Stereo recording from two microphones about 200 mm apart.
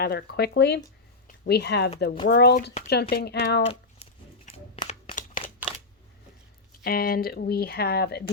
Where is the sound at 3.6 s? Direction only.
30° left (ahead or behind).